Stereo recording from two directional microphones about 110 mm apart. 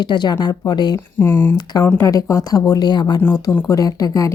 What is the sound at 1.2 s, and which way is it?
Speech, 20° left (ahead or behind).